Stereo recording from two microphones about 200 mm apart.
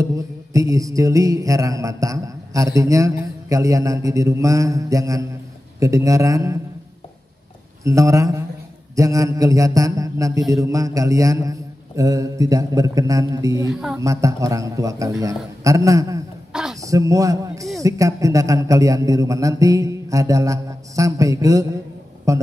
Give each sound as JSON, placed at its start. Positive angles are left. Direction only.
{"t": 0.0, "sound": "a man's voice", "side_deg": -15}
{"t": 7.8, "sound": "a man's voice", "side_deg": -15}
{"t": 13.7, "sound": "a woman's voice", "side_deg": 0}
{"t": 13.9, "sound": "a man's voice", "side_deg": -15}